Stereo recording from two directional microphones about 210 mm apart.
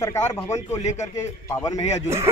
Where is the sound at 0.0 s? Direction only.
15° left (ahead or behind).